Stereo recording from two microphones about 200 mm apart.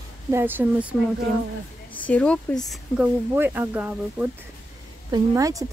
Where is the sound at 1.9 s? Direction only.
5° left (ahead or behind).